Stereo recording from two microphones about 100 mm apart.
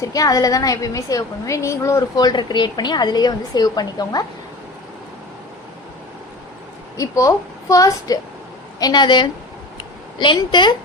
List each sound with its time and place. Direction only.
0.0 s a woman's voice: 35° left (ahead or behind)
2.1 s a woman's voice: 45° left (ahead or behind)
6.9 s a woman's voice: 30° left (ahead or behind); by 9.3 s 50° left (ahead or behind)
9.7 s a sound: 50° left (ahead or behind)